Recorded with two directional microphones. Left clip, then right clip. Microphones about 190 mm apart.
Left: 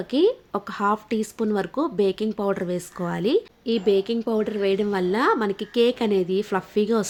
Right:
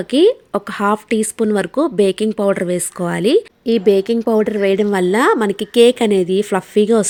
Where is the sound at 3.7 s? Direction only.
45° right (ahead or behind).